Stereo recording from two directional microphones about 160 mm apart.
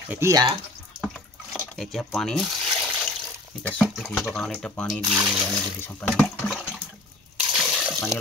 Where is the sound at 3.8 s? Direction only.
Centre (ahead or behind).